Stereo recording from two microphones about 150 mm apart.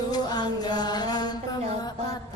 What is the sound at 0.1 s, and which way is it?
Music, 25° left (ahead or behind).